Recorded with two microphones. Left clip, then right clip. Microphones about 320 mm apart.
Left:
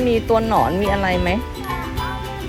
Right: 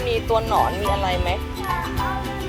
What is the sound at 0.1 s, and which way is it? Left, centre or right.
Music, left.